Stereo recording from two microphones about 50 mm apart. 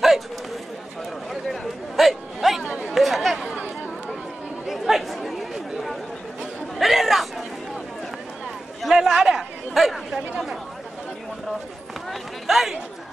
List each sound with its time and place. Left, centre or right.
1.3 s a sound: centre
2.6 s chatter: right
2.9 s chatter: centre
3.5 s chatter: right
4.6 s chatter: centre
8.8 s chatter: centre
12.1 s a sound: centre